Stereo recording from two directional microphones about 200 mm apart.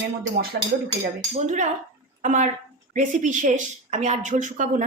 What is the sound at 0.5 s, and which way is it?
Speech, 50° right (ahead or behind).